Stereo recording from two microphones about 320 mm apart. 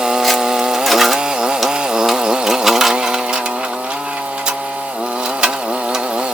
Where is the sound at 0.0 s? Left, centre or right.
Centre.